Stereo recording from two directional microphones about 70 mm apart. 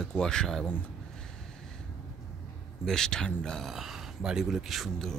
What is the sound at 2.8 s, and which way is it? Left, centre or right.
Speech, centre.